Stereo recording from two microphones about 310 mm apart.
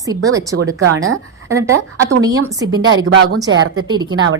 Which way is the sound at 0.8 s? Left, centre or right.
Right.